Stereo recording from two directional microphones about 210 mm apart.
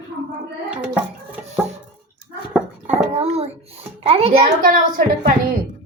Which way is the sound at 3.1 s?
30° right (ahead or behind).